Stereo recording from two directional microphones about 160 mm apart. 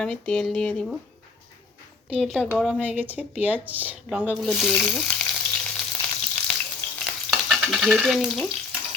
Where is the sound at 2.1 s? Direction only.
Centre (ahead or behind).